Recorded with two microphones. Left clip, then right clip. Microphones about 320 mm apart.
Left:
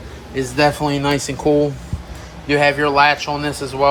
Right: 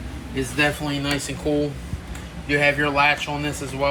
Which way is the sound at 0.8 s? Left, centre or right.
Centre.